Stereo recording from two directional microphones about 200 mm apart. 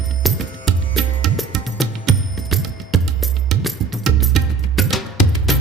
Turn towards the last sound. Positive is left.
turn(degrees=0)  # may be behind; listen again after turning